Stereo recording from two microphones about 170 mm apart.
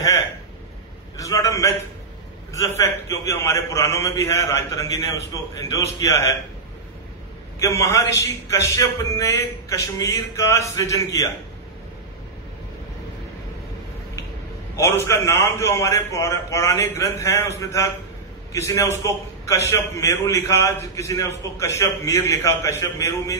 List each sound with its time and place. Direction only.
1.1 s a sound: 20° left (ahead or behind)
2.5 s a man's voice: 15° left (ahead or behind)
7.5 s a man's voice: 15° left (ahead or behind)
14.8 s a man's voice: 15° left (ahead or behind)